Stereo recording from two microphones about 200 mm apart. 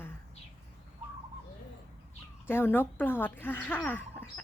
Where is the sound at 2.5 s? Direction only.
10° left (ahead or behind).